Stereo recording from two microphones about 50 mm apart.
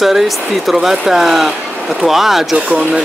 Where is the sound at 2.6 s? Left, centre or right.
Centre.